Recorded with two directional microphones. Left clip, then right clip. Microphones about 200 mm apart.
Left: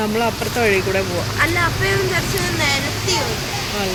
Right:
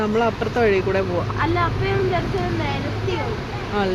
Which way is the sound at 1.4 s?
40° right (ahead or behind).